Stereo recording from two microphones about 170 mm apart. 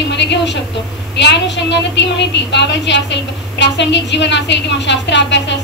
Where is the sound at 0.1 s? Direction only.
90° left.